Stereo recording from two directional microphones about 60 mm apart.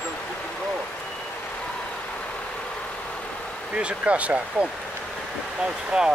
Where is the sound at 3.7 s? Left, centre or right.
Right.